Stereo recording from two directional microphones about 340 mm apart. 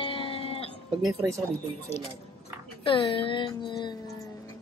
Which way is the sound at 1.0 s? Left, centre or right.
Centre.